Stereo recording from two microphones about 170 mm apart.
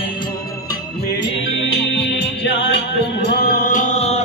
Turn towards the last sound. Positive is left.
turn(degrees=40)  # may be behind; listen again after turning